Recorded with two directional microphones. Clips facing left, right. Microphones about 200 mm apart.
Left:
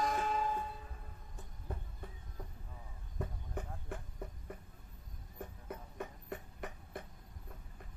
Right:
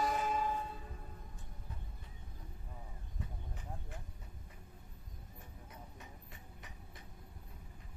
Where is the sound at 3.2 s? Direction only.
55° left (ahead or behind).